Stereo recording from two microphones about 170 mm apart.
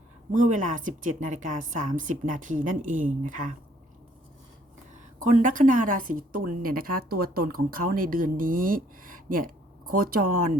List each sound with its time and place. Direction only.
0.3 s a woman's voice: 45° right (ahead or behind)
5.2 s a woman's voice: 50° right (ahead or behind)